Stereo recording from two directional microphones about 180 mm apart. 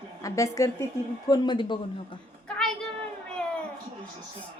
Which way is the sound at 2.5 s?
5° left (ahead or behind).